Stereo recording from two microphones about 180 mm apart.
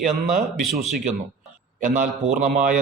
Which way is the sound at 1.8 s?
45° right (ahead or behind).